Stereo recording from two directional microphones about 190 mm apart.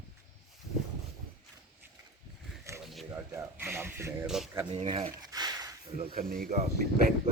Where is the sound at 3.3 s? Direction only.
10° right (ahead or behind).